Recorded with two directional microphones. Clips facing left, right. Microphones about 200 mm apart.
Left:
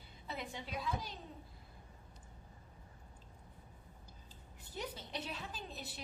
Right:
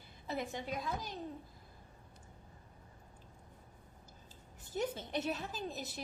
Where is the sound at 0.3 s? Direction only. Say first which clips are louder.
Right 6 dB; 45° right (ahead or behind).